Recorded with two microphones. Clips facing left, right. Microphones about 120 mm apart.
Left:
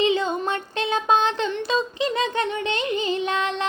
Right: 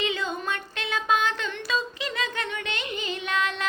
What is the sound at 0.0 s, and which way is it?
Child singing, 30° left (ahead or behind).